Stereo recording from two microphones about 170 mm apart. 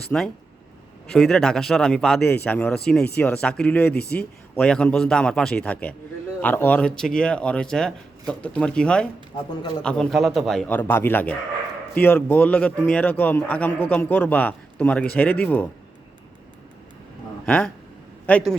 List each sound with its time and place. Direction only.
0.0 s speech: 5° left (ahead or behind)
17.4 s speech: 10° left (ahead or behind)